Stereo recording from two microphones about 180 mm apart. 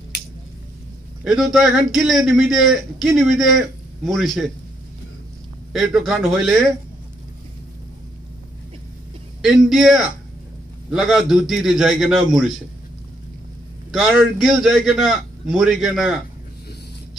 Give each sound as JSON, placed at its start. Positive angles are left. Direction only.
{"t": 1.2, "sound": "a man's voice", "side_deg": 0}
{"t": 5.7, "sound": "a man's voice", "side_deg": 0}
{"t": 9.4, "sound": "a man's voice", "side_deg": 0}
{"t": 13.9, "sound": "a man's voice", "side_deg": 0}